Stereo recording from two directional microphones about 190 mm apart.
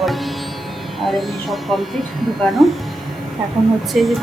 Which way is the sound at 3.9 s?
Centre (ahead or behind).